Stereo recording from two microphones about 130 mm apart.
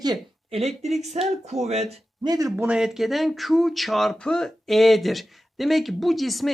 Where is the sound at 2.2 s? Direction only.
30° right (ahead or behind).